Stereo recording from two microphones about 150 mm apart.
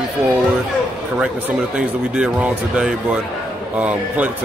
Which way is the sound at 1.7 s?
5° right (ahead or behind).